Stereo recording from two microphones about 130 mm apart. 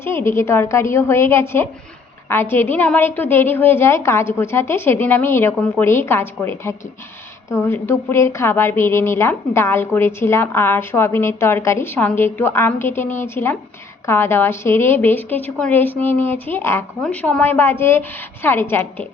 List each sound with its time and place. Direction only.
0.0 s a woman's voice: 20° left (ahead or behind)